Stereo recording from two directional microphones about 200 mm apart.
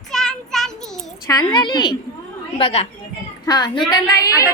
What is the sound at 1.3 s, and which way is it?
A woman's voice, 20° left (ahead or behind).